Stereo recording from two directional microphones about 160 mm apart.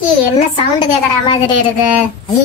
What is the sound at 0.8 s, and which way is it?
Speech, 30° left (ahead or behind).